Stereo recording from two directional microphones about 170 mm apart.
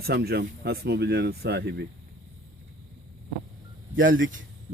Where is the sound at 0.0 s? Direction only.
70° right (ahead or behind).